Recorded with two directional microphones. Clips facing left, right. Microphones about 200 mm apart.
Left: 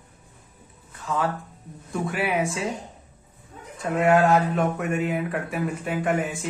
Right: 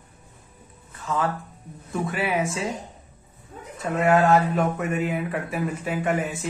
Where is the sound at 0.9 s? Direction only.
Centre (ahead or behind).